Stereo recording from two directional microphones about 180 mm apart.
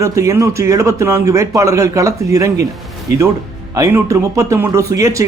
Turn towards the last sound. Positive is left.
turn(degrees=-15)  # may be behind; listen again after turning